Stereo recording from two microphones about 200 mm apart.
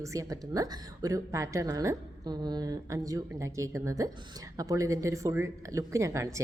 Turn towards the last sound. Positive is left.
turn(degrees=-15)  # may be behind; listen again after turning